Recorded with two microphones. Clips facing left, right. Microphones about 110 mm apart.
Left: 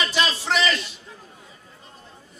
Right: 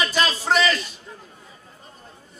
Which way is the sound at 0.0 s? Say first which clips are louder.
Right 1 dB; 45° right (ahead or behind).